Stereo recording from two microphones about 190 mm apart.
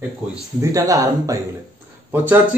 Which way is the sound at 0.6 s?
15° right (ahead or behind).